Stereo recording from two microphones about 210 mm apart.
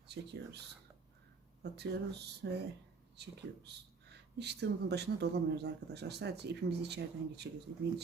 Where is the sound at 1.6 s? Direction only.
50° right (ahead or behind).